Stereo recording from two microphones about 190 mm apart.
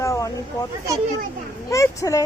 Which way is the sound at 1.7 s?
15° left (ahead or behind).